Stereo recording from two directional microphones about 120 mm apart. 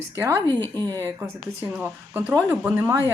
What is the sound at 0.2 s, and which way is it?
Speech, 25° right (ahead or behind).